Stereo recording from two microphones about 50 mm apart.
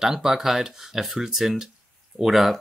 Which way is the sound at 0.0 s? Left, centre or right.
Centre.